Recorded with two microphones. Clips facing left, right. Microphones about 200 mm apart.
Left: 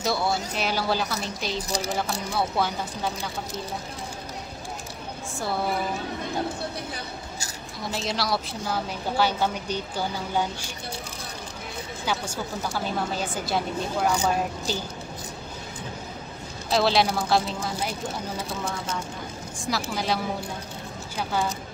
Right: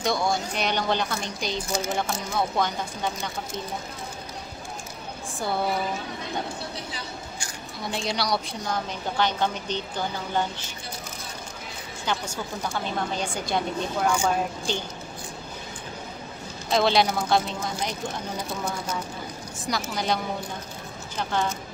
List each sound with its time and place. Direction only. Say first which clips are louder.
0.0 s a woman's voice: right 1 dB; 5° left (ahead or behind)
1.7 s speech: right 2 dB; 35° left (ahead or behind)
2.3 s a woman's voice: even; 5° left (ahead or behind)
7.8 s a woman's voice: even; centre (ahead or behind)
12.1 s a woman's voice: even; 5° left (ahead or behind)
16.7 s a woman's voice: even; centre (ahead or behind)
18.6 s a woman's voice: right 1 dB; 5° right (ahead or behind)
21.2 s a woman's voice: even; 10° left (ahead or behind)